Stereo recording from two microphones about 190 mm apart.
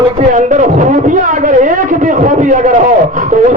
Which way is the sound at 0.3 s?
40° right (ahead or behind).